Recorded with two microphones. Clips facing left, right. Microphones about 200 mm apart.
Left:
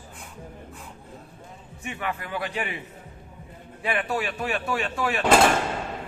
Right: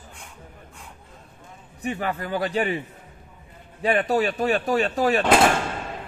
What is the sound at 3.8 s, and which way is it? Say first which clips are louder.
Speech: right 6 dB; 35° right (ahead or behind).